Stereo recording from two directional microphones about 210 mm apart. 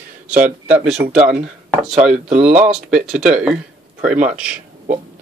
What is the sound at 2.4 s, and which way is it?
Speech, 5° right (ahead or behind).